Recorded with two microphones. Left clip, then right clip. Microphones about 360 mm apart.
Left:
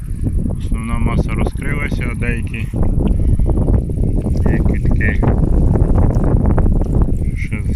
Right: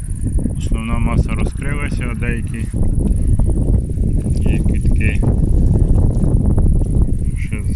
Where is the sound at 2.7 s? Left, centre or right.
Left.